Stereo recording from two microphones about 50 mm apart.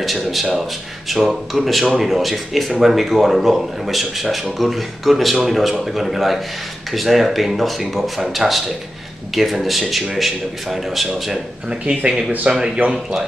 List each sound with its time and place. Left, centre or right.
0.0 s speech: centre
11.7 s speech: right